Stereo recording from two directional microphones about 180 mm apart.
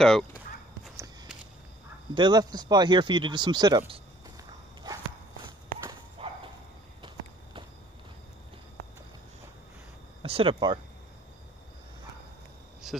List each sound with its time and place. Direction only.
2.1 s speech: 25° right (ahead or behind)
4.9 s walk: 20° right (ahead or behind)
6.2 s a sound: 30° right (ahead or behind)
10.2 s speech: 30° right (ahead or behind)
12.8 s insect: centre (ahead or behind)